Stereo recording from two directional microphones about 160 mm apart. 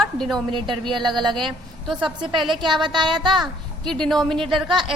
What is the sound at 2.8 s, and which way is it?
Speech, 30° right (ahead or behind).